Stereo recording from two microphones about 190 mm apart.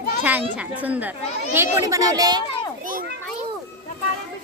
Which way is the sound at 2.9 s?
50° right (ahead or behind).